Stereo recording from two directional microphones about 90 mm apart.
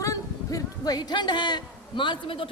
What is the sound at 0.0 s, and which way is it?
Speech, 40° left (ahead or behind).